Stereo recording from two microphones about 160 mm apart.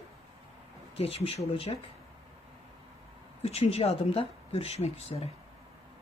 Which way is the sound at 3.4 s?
40° left (ahead or behind).